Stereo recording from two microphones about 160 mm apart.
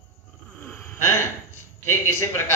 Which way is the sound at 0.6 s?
10° left (ahead or behind).